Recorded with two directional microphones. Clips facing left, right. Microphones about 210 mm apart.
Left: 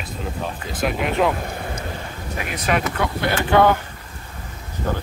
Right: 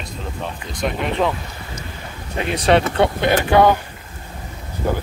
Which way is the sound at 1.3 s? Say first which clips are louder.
Left 5 dB; 55° left (ahead or behind).